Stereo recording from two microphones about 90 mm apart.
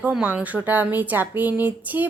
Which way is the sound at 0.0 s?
15° right (ahead or behind).